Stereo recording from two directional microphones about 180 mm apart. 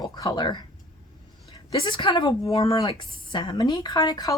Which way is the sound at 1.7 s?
25° left (ahead or behind).